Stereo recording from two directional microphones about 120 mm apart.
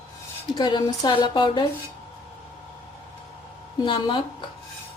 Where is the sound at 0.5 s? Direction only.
40° left (ahead or behind).